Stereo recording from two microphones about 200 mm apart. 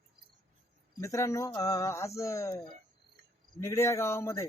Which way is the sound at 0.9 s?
15° left (ahead or behind).